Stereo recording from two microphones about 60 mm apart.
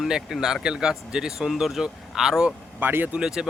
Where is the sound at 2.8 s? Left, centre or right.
Right.